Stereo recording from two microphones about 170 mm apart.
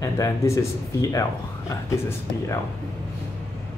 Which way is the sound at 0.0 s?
20° left (ahead or behind).